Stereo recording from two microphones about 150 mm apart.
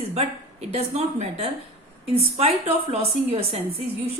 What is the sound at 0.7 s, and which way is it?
Speech, 45° right (ahead or behind).